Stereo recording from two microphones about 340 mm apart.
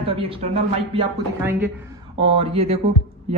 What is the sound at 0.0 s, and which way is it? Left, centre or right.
Speech, centre.